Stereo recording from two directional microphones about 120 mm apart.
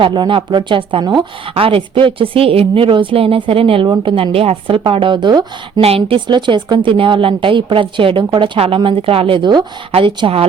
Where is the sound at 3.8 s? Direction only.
40° right (ahead or behind).